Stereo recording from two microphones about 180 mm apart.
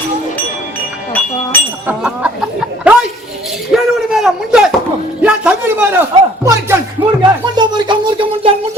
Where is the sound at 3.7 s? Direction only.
Centre (ahead or behind); by 8.5 s 25° right (ahead or behind).